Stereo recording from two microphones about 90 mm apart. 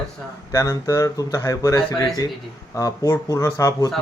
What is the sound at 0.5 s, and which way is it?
Speech, 40° left (ahead or behind).